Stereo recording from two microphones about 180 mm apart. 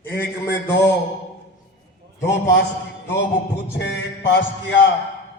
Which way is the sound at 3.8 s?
75° left (ahead or behind).